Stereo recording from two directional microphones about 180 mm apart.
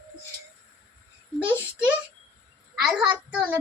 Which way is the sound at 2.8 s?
5° right (ahead or behind).